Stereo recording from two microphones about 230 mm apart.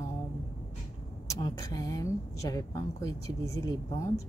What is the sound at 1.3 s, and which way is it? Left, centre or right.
A woman's voice, centre.